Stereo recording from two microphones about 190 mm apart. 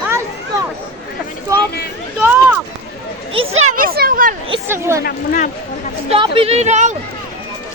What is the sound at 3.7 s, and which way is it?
Speech, 50° right (ahead or behind).